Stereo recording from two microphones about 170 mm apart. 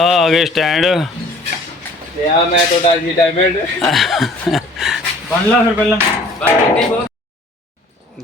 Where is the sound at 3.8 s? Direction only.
Centre (ahead or behind).